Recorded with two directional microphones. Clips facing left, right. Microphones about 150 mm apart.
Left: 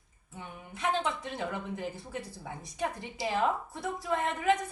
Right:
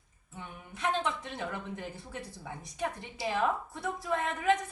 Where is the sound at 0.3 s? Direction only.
10° left (ahead or behind).